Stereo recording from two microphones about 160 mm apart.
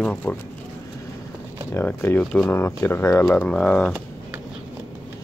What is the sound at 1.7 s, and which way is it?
Speech, 15° left (ahead or behind).